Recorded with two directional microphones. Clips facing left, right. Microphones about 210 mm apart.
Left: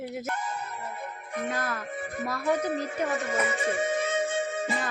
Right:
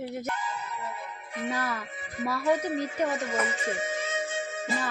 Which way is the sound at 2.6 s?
55° left (ahead or behind).